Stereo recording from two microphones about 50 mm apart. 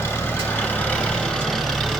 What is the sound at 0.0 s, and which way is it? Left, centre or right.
Vehicle, left.